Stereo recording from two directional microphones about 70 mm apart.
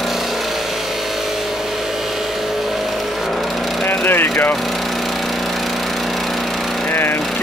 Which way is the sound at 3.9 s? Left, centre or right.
Left.